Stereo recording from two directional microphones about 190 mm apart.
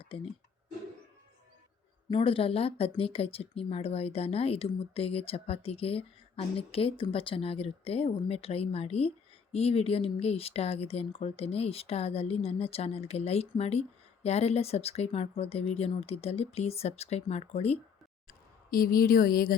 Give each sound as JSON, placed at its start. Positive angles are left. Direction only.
{"t": 2.0, "sound": "speech", "side_deg": 30}
{"t": 18.3, "sound": "speech", "side_deg": 50}